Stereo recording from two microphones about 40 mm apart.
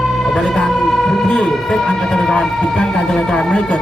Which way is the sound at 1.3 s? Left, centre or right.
Left.